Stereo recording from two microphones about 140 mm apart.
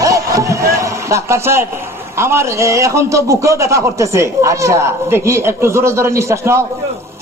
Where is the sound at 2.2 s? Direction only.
20° right (ahead or behind).